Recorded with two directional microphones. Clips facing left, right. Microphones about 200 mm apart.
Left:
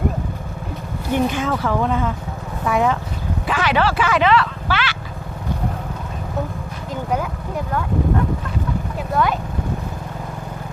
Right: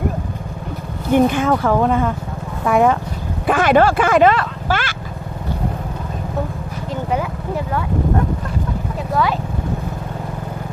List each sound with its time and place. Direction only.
1.1 s speech: 50° right (ahead or behind)